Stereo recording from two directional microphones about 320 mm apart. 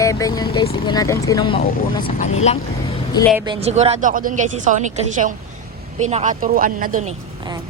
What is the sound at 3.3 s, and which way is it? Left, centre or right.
Speech, centre.